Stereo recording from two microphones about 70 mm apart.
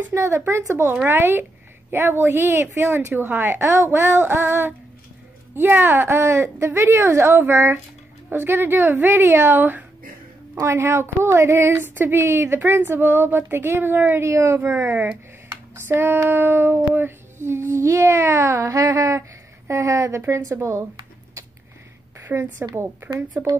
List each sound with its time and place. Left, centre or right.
0.1 s speech: right
1.0 s child singing: right
14.2 s speech: right
14.9 s speech: right
16.3 s child singing: right
19.7 s speech: right
20.2 s child singing: right
22.2 s a sound: right
23.2 s speech: right